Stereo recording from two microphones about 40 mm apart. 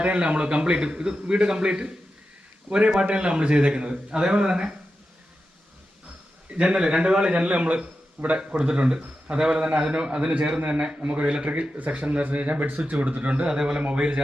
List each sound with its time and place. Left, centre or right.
0.0 s a man's voice: right
3.1 s a man's voice: right
6.5 s a man's voice: right
11.1 s a man's voice: right
12.8 s speech: right
13.5 s a man's voice: centre